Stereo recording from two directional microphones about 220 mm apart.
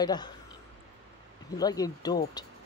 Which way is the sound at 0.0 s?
20° left (ahead or behind).